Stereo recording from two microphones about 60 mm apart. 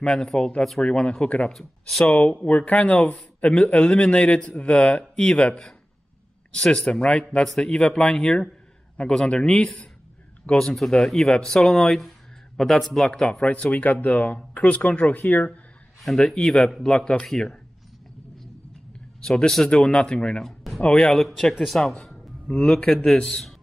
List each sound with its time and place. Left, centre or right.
0.0 s speech: centre
1.5 s speech: centre
2.4 s speech: left
7.4 s speech: centre
7.7 s speech: centre
16.3 s speech: centre
19.2 s speech: centre
20.4 s music: centre
20.8 s speech: centre
21.2 s speech: centre
22.5 s speech: centre